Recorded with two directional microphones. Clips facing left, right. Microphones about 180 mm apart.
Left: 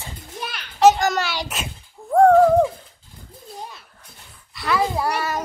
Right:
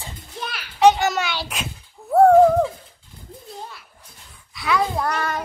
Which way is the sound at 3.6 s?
20° left (ahead or behind).